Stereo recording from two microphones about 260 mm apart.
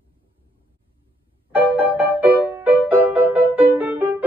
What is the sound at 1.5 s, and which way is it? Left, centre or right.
Music, centre.